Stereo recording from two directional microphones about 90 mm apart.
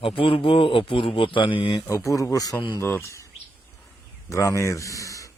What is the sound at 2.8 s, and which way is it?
Speech, 30° left (ahead or behind).